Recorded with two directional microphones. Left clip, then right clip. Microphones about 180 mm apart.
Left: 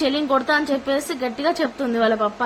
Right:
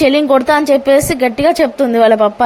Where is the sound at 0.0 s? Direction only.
40° right (ahead or behind).